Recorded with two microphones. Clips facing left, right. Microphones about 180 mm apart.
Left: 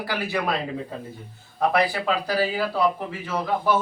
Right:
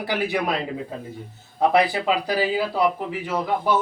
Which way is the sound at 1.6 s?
20° right (ahead or behind).